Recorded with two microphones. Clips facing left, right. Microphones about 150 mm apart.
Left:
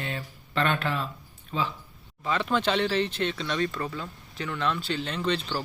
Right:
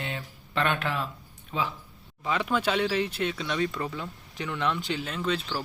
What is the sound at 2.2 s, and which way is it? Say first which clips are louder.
Speech: left 1 dB; 15° right (ahead or behind).